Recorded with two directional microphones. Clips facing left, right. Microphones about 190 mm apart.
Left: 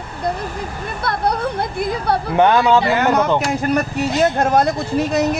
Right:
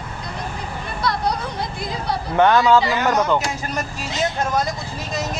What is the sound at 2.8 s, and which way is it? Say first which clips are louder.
Speech: left 3 dB; 55° left (ahead or behind).